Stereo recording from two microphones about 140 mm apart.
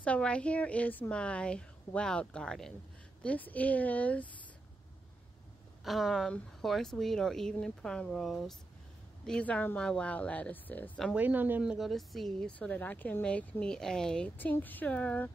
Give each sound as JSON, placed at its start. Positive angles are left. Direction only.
{"t": 0.0, "sound": "speech", "side_deg": 10}
{"t": 5.9, "sound": "speech", "side_deg": 0}
{"t": 11.1, "sound": "speech", "side_deg": -10}